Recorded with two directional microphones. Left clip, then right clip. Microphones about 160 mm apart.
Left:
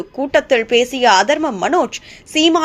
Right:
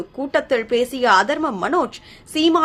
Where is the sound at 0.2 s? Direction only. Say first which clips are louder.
Left 5 dB; 15° left (ahead or behind).